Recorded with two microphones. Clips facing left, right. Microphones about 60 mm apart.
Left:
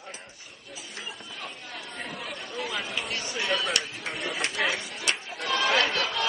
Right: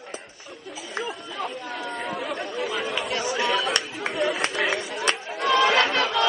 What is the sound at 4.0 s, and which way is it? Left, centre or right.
Chatter, right.